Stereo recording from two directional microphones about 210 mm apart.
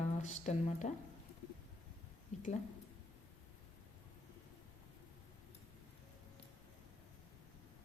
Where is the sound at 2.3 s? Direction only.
35° left (ahead or behind).